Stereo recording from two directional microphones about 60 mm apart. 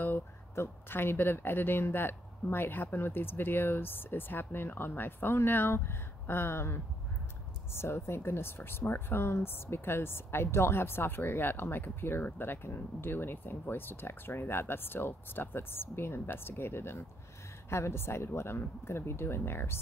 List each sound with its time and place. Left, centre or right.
0.0 s a woman's voice: left